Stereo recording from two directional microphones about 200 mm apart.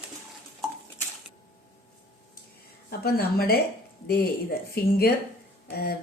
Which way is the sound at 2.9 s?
50° left (ahead or behind).